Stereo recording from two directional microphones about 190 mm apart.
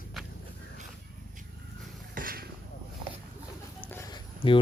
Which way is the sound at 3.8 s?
10° left (ahead or behind).